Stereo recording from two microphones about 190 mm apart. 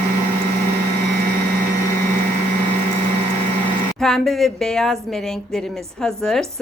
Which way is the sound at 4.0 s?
Centre (ahead or behind).